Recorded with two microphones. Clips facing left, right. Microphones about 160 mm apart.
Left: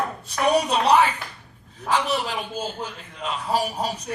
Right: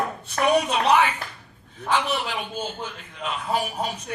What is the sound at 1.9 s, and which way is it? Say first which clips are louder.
Speech: left 1 dB; 40° left (ahead or behind).